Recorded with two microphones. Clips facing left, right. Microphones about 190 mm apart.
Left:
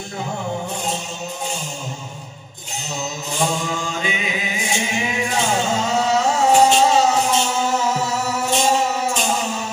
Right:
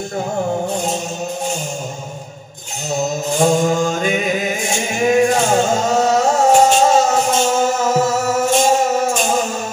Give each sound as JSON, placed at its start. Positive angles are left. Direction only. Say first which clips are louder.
{"t": 3.5, "sound": "music", "louder": "right 9 dB", "side_deg": -45}